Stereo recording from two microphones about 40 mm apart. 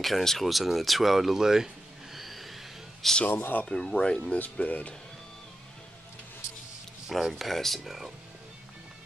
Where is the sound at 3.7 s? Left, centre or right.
Centre.